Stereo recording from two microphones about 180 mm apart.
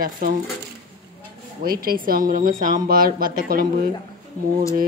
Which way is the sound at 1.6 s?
55° right (ahead or behind).